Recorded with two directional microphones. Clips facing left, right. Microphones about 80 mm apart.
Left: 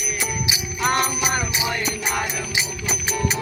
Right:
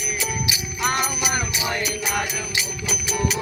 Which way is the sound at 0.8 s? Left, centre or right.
Centre.